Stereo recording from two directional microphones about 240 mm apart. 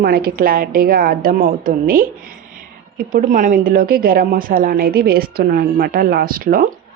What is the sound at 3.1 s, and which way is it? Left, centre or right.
A woman's voice, right.